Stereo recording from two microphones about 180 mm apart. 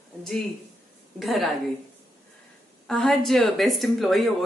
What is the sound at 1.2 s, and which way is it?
Speech, centre (ahead or behind).